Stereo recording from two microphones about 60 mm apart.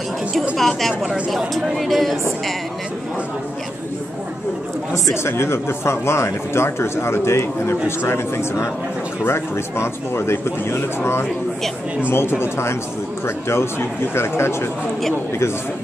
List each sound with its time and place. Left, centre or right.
0.6 s a woman's voice: centre
5.1 s speech: left